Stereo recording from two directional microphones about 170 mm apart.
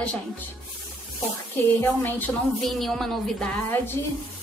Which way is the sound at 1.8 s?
10° left (ahead or behind).